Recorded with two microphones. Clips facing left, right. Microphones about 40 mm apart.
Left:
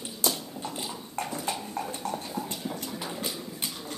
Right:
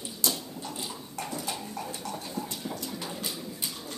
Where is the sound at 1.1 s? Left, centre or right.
Left.